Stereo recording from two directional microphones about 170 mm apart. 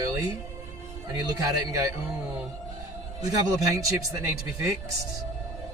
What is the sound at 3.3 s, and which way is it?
A man's voice, 20° right (ahead or behind).